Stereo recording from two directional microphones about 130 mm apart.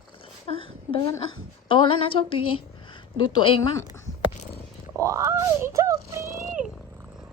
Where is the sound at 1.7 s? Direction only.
40° left (ahead or behind).